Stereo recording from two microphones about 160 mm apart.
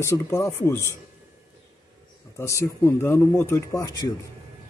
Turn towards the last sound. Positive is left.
turn(degrees=25)  # may be behind; listen again after turning